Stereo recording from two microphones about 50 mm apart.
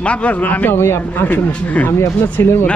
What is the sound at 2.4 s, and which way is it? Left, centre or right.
Speech, left.